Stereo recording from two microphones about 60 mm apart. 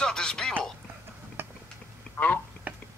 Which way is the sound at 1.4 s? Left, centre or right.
Right.